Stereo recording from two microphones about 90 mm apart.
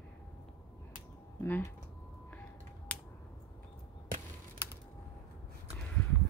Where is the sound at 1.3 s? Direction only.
20° left (ahead or behind).